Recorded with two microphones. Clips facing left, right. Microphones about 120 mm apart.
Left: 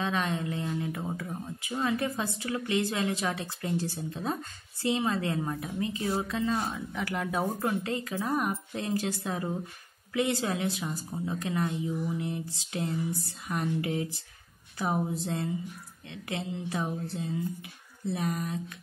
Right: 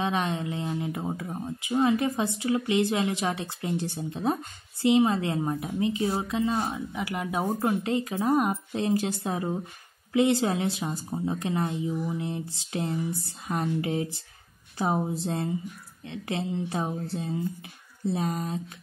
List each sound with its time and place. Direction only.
0.0 s speech: 20° right (ahead or behind)